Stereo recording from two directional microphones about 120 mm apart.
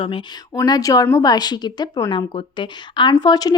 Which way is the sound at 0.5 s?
30° left (ahead or behind).